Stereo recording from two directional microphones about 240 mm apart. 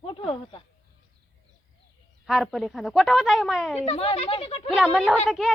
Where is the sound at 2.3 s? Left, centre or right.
Centre.